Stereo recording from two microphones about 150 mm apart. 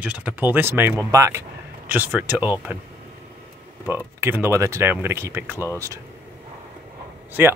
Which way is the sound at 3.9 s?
15° right (ahead or behind).